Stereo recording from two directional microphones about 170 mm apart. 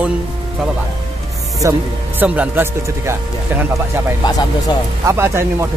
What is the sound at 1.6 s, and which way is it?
Speech, 15° right (ahead or behind).